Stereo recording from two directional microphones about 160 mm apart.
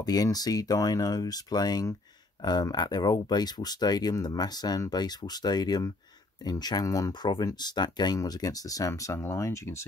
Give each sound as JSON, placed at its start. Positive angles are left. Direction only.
{"t": 0.0, "sound": "speech", "side_deg": 25}